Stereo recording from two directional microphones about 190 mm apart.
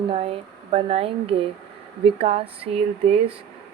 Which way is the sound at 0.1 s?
30° right (ahead or behind).